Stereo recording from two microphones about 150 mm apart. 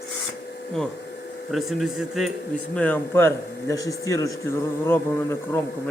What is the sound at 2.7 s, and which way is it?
A man's voice, 10° left (ahead or behind).